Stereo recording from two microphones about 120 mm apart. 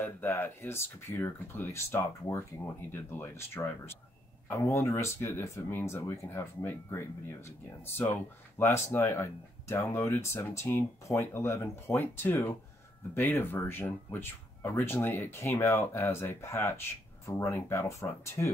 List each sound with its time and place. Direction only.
0.0 s speech: 15° left (ahead or behind)